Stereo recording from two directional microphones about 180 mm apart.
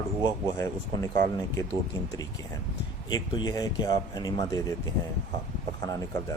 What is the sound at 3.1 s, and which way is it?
Speech, 20° left (ahead or behind).